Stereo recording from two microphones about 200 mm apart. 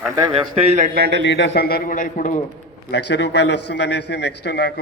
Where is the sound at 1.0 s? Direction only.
55° right (ahead or behind).